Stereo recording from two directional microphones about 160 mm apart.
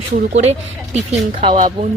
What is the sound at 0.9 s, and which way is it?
Speech, 35° right (ahead or behind).